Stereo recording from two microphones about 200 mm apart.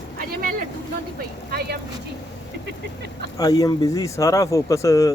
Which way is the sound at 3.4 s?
20° left (ahead or behind).